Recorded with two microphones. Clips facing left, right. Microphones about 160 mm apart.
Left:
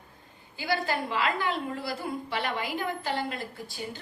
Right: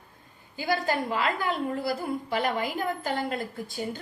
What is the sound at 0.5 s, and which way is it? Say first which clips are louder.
A woman's voice: right 2 dB; 45° right (ahead or behind).